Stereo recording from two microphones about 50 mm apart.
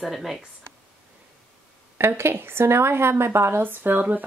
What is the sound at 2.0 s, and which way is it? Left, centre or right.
A woman's voice, right.